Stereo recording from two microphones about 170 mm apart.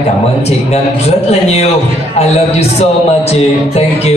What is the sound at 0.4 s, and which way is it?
A man's voice, 40° left (ahead or behind).